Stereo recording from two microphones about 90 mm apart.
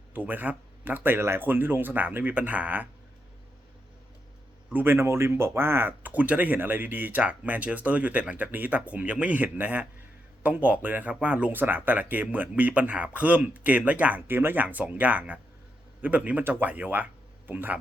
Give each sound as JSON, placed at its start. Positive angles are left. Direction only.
{"t": 0.1, "sound": "speech", "side_deg": -20}
{"t": 4.7, "sound": "speech", "side_deg": -25}